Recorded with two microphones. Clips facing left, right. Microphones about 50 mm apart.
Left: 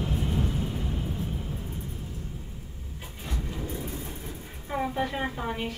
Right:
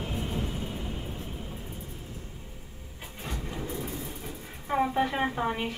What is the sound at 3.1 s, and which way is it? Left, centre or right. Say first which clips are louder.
Vehicle: even; right.